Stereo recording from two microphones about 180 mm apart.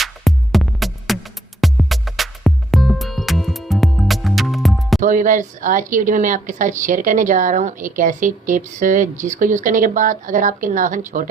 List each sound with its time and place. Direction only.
0.0 s music: centre (ahead or behind)
4.9 s a woman's voice: 45° right (ahead or behind)